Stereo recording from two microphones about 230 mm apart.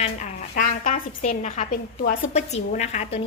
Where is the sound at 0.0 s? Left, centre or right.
Left.